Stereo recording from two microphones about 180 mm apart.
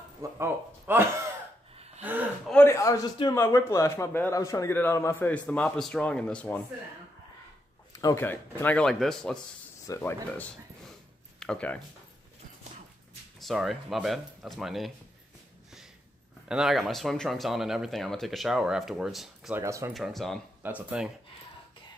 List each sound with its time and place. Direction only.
0.2 s speech: 15° right (ahead or behind)
2.0 s gasp: 10° right (ahead or behind)
2.5 s a man's voice: 15° left (ahead or behind)
7.9 s a man's voice: 20° left (ahead or behind)
13.4 s speech: centre (ahead or behind)
16.4 s speech: 5° right (ahead or behind)
19.6 s speech: 15° right (ahead or behind)
19.9 s speech: centre (ahead or behind)